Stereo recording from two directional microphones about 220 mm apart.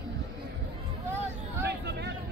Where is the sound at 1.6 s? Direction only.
50° right (ahead or behind).